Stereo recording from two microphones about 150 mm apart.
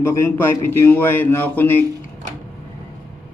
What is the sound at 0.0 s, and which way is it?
A man's voice, 20° left (ahead or behind).